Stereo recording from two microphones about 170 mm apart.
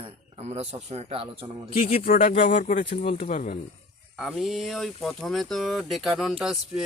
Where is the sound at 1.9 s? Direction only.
55° left (ahead or behind).